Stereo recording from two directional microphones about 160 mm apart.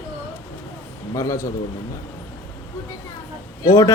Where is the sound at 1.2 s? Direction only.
20° left (ahead or behind).